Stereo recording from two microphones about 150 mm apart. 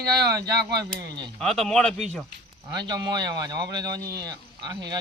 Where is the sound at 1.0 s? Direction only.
30° right (ahead or behind).